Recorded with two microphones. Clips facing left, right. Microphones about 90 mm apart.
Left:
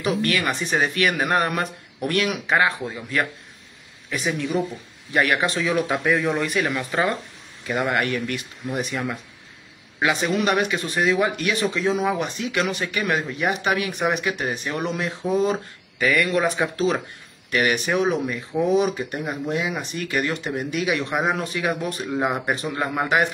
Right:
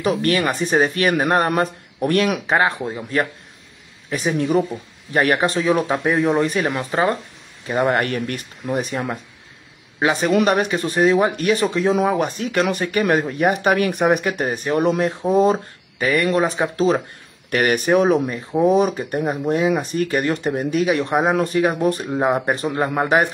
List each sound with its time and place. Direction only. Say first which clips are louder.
0.0 s speech: right 4 dB; 40° right (ahead or behind)
17.5 s speech: right 4 dB; 45° right (ahead or behind)